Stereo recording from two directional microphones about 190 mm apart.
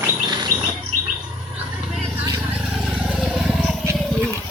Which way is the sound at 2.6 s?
Centre (ahead or behind).